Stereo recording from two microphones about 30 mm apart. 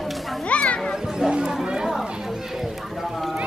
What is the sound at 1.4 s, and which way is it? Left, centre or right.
Chatter, centre.